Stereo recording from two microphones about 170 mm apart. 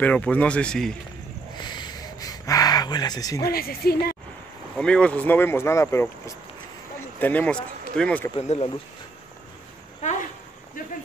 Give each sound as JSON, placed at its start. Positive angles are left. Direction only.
{"t": 0.0, "sound": "speech", "side_deg": 10}
{"t": 1.6, "sound": "a sound", "side_deg": 25}
{"t": 3.4, "sound": "a woman's voice", "side_deg": 65}
{"t": 4.7, "sound": "speech", "side_deg": 5}
{"t": 8.4, "sound": "speech", "side_deg": 35}